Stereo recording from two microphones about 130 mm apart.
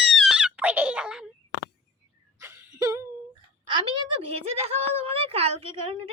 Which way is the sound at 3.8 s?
45° right (ahead or behind).